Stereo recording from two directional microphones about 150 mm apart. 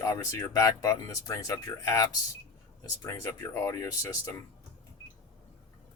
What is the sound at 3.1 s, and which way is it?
Speech, 15° left (ahead or behind).